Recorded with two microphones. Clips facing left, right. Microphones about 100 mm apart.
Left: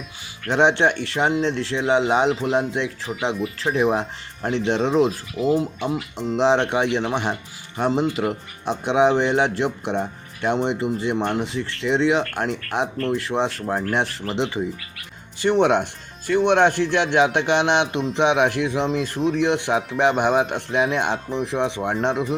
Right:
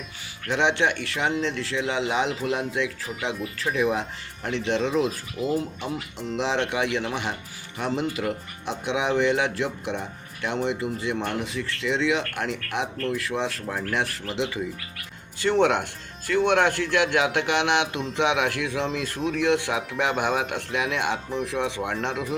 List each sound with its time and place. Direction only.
0.4 s speech: 35° left (ahead or behind)
5.5 s speech: 25° left (ahead or behind)
15.4 s speech: 20° left (ahead or behind)